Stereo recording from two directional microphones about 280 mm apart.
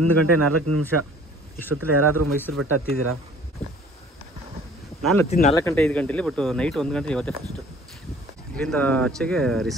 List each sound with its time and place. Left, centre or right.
0.0 s speech: right
1.9 s speech: right
5.0 s speech: centre
8.5 s speech: centre